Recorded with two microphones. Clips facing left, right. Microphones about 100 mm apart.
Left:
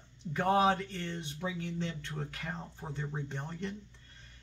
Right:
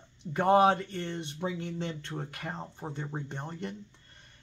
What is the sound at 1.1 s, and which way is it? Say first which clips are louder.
Speech: right 4 dB; 65° right (ahead or behind).